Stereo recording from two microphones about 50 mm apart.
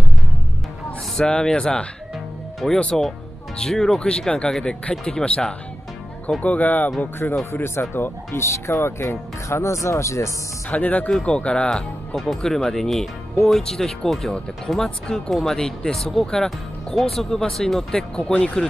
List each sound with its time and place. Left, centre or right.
1.1 s speech: centre
2.6 s speech: centre
4.0 s speech: left
6.4 s speech: left
10.7 s speech: left
12.4 s speech: centre
18.1 s speech: left
18.4 s speech: centre